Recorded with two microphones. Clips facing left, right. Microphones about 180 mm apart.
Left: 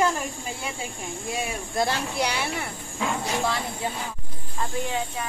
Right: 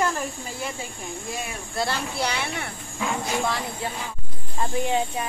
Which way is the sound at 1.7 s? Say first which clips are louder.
Left 1 dB; 15° left (ahead or behind).